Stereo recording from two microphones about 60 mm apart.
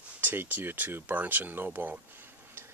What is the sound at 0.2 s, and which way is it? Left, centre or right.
Speech, right.